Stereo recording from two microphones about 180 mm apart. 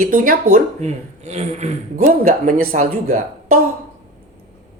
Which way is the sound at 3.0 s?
35° right (ahead or behind).